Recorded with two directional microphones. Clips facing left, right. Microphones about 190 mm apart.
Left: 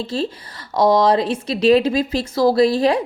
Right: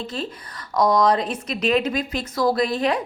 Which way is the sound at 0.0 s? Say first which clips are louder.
Left 6 dB; 30° left (ahead or behind).